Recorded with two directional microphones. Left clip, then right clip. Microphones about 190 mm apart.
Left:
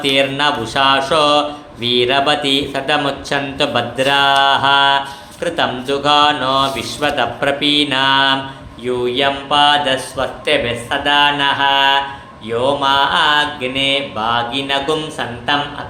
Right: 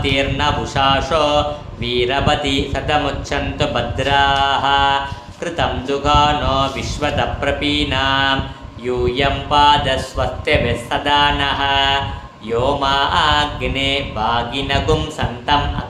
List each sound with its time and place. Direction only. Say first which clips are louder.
0.0 s speech: left 3 dB; 20° left (ahead or behind)